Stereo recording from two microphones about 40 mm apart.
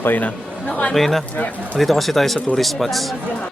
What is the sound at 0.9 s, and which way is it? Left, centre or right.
Speech, centre.